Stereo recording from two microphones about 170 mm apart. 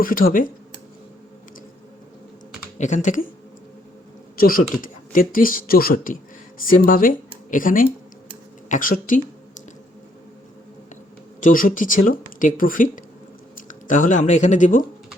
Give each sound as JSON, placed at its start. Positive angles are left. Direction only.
{"t": 0.0, "sound": "speech", "side_deg": 55}
{"t": 2.7, "sound": "speech", "side_deg": 45}
{"t": 4.4, "sound": "a woman's voice", "side_deg": 60}
{"t": 11.3, "sound": "speech", "side_deg": 50}